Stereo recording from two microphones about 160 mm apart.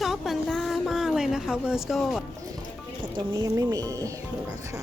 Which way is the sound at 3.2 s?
25° right (ahead or behind).